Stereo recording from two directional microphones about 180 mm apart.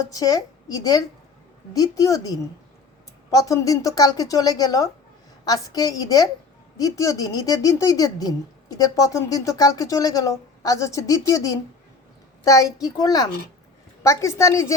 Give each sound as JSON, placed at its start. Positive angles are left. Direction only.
{"t": 0.1, "sound": "a woman's voice", "side_deg": 20}